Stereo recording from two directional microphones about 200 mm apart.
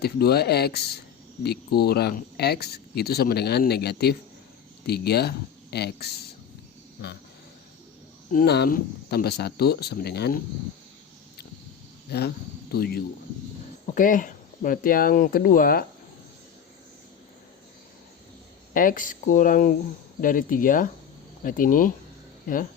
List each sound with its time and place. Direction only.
0.0 s speech: 50° left (ahead or behind)
8.3 s speech: 50° left (ahead or behind)
12.1 s speech: 55° left (ahead or behind)
18.7 s speech: 45° left (ahead or behind)